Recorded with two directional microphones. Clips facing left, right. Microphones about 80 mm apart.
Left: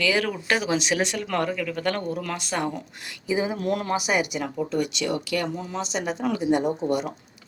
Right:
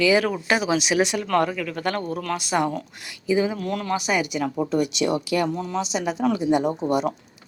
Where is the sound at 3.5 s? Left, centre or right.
Left.